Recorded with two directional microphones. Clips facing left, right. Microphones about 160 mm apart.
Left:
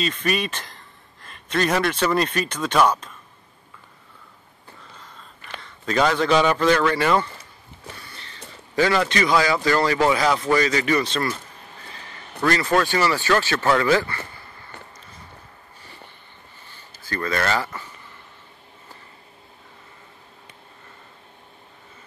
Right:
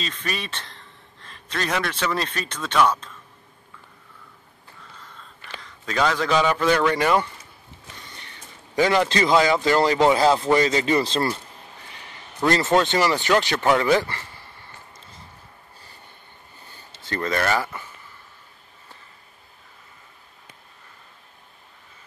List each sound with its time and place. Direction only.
0.0 s speech: 5° left (ahead or behind)
5.6 s a man's voice: centre (ahead or behind); by 7.2 s 15° right (ahead or behind)
8.0 s a sound: 15° right (ahead or behind)
8.7 s speech: 20° right (ahead or behind)
11.9 s a sound: 15° right (ahead or behind)
12.5 s speech: 20° right (ahead or behind)
16.9 s speech: 25° right (ahead or behind)